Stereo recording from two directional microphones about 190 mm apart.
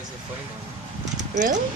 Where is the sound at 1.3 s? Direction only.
40° right (ahead or behind).